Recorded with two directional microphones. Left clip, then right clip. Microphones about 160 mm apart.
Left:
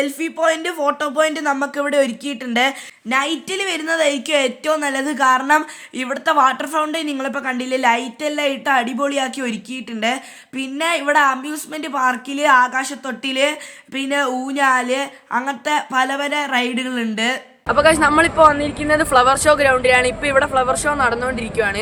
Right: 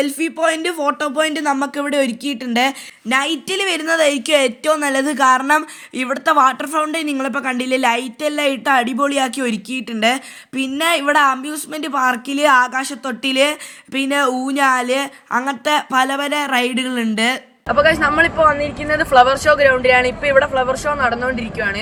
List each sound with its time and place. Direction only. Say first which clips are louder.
0.0 s speech: right 1 dB; 20° right (ahead or behind)
3.1 s a woman's voice: right 2 dB; 30° right (ahead or behind)
17.7 s a woman's voice: even; 15° left (ahead or behind)